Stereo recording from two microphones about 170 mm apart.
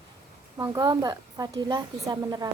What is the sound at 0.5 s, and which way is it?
A woman's voice, 20° right (ahead or behind).